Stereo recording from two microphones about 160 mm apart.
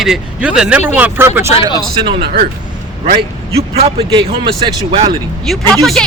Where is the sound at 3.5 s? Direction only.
40° right (ahead or behind).